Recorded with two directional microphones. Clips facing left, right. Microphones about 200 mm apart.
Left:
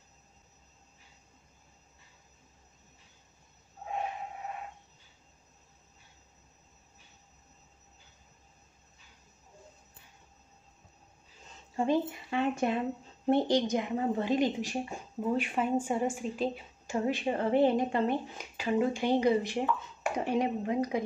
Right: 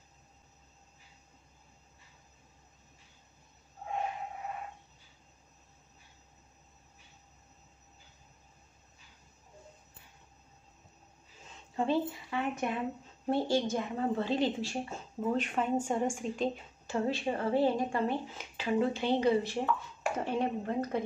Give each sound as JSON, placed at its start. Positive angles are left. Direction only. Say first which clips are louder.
{"t": 11.7, "sound": "a woman's voice", "louder": "left 2 dB", "side_deg": 15}
{"t": 12.3, "sound": "a woman's voice", "louder": "left 4 dB", "side_deg": 30}